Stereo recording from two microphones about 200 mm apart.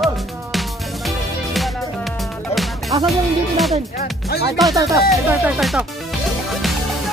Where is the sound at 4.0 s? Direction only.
50° left (ahead or behind).